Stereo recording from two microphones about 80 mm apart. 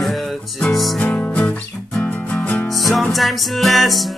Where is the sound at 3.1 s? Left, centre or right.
Centre.